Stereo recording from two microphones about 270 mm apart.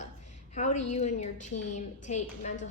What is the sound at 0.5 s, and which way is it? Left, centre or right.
A woman's voice, left.